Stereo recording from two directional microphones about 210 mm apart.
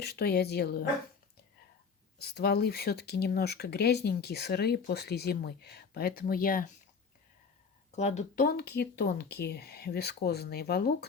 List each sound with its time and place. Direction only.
0.0 s speech: 50° left (ahead or behind)
2.1 s speech: 50° left (ahead or behind)
7.9 s speech: 30° left (ahead or behind); by 10.9 s 50° left (ahead or behind)